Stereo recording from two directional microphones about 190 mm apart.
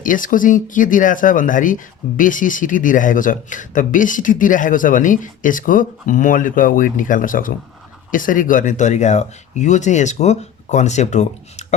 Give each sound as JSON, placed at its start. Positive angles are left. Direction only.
{"t": 0.0, "sound": "speech", "side_deg": 45}